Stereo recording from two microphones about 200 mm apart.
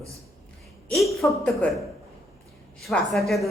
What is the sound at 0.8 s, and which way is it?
Speech, centre (ahead or behind).